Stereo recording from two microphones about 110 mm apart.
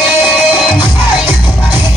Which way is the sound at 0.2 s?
45° left (ahead or behind).